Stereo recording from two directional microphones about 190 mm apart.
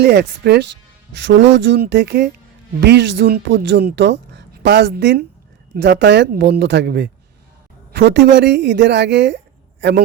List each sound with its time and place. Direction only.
0.0 s speech: 60° right (ahead or behind)